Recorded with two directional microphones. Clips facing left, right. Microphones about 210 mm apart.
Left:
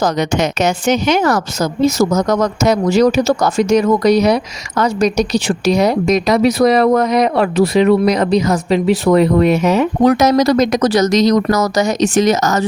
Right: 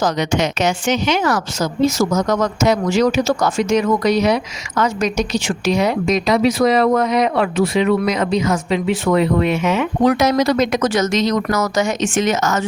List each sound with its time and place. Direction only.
0.0 s speech: 45° left (ahead or behind)